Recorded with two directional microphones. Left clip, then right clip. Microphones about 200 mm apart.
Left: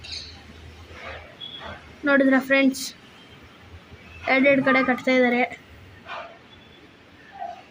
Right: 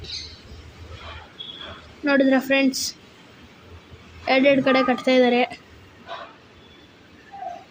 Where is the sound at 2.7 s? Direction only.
15° left (ahead or behind).